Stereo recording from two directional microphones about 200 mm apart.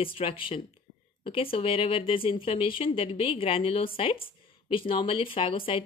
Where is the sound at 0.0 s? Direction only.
25° left (ahead or behind).